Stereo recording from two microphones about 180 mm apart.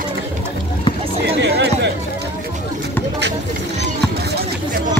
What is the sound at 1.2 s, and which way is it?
Chatter, 65° right (ahead or behind).